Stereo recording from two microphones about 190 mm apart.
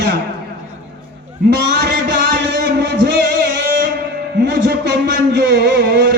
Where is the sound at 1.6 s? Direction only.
60° right (ahead or behind).